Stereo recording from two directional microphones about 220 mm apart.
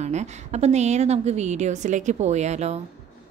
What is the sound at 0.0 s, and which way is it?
A woman's voice, 30° right (ahead or behind).